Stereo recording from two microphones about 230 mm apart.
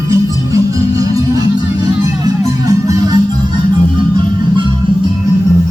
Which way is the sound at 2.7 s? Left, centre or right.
Centre.